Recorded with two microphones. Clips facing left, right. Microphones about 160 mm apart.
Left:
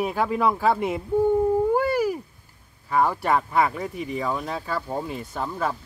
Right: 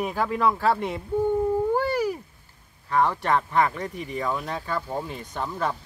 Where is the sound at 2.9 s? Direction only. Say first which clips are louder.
Left 1 dB; 10° left (ahead or behind).